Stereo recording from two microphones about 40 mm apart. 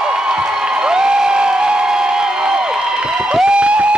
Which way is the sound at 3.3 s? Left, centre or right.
Right.